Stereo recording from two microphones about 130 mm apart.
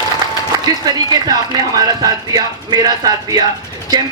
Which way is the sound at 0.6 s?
30° right (ahead or behind).